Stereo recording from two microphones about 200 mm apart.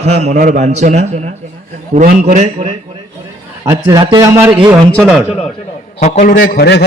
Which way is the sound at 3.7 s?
20° right (ahead or behind).